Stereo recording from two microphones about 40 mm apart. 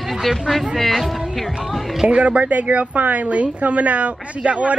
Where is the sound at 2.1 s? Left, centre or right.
Right.